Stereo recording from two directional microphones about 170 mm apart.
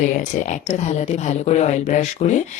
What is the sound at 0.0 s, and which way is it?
Speech, 45° left (ahead or behind).